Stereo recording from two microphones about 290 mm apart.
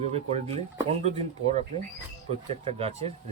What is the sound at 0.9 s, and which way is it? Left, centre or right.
Speech, right.